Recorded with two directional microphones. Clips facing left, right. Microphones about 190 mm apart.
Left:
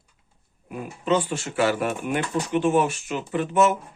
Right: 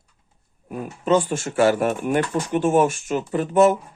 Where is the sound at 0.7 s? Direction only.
45° right (ahead or behind).